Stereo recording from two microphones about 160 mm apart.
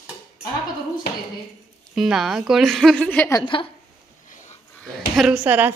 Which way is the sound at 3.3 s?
30° left (ahead or behind).